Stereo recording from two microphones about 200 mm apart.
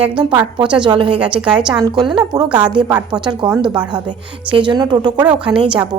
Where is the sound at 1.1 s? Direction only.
5° right (ahead or behind).